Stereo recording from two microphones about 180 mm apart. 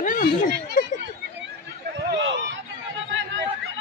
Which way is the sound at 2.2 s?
90° right.